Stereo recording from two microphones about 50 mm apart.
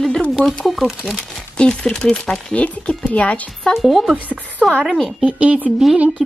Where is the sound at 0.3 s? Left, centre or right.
Centre.